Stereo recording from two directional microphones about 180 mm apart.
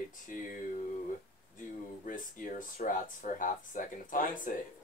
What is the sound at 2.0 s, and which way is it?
Speech, 50° left (ahead or behind).